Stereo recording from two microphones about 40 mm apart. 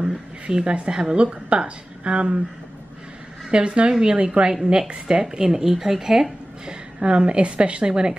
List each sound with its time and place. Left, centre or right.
0.0 s speech: right
3.4 s a woman's voice: right
5.2 s speech: centre
6.7 s a woman's voice: right